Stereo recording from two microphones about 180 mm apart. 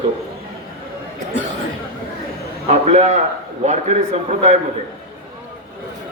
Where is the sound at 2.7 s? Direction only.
40° right (ahead or behind).